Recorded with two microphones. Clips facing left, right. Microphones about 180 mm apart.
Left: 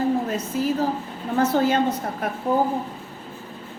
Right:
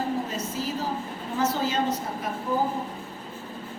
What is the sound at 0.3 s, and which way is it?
A woman's voice, 60° left (ahead or behind).